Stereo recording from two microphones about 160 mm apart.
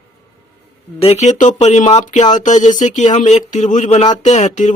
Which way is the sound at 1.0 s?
40° left (ahead or behind).